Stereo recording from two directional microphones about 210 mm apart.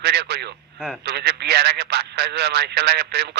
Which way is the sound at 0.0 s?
50° right (ahead or behind).